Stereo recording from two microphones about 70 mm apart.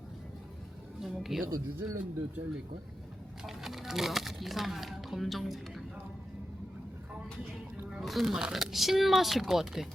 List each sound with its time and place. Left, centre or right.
1.0 s speech: centre
1.5 s speech: right
3.4 s speech: centre
7.9 s speech: centre